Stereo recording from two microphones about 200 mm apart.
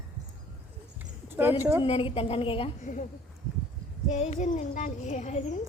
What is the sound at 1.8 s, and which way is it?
A woman's voice, 30° left (ahead or behind).